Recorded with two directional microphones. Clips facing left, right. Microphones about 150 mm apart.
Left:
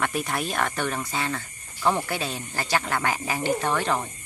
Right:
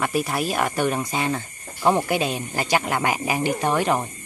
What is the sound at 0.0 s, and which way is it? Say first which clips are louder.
Speech: right 4 dB; 5° right (ahead or behind).